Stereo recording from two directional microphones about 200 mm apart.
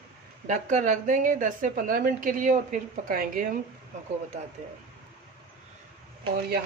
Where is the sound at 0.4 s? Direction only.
40° right (ahead or behind).